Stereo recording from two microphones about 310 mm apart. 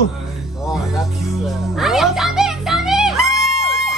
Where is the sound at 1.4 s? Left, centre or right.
Centre.